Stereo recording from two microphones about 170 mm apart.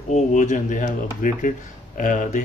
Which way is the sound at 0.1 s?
45° left (ahead or behind).